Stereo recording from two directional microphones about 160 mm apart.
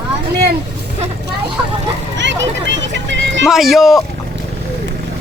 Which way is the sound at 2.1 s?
90° right.